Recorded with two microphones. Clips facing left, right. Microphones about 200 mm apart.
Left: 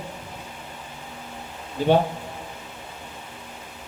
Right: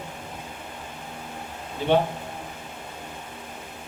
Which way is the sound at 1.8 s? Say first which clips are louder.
Left 3 dB; 40° left (ahead or behind).